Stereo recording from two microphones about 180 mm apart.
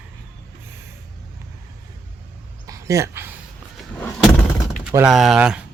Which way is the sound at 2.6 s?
15° right (ahead or behind).